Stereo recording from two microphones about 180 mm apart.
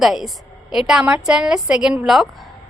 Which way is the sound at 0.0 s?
Centre (ahead or behind).